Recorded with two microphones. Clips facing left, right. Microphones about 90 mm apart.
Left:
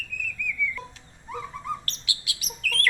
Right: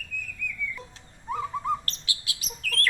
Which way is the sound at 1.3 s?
30° right (ahead or behind).